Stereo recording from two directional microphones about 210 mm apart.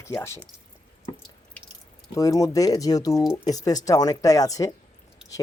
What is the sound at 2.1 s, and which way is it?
Speech, 15° left (ahead or behind).